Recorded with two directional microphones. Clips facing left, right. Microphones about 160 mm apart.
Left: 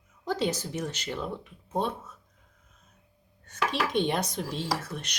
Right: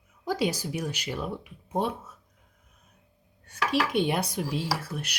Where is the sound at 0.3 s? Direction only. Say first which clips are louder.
Right 1 dB; 10° right (ahead or behind).